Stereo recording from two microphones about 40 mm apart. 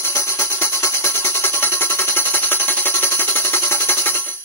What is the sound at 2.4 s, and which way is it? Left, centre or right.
Music, left.